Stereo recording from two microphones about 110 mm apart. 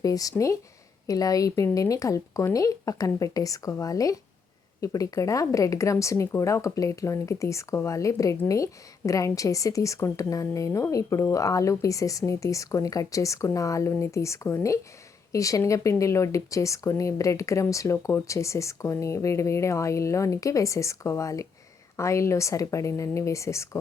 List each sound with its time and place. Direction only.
0.0 s a woman's voice: 35° left (ahead or behind)